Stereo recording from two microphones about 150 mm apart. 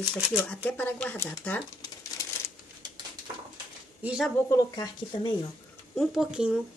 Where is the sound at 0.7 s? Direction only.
10° left (ahead or behind).